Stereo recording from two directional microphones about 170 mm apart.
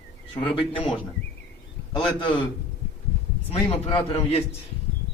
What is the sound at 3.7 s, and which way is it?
Speech, 35° left (ahead or behind).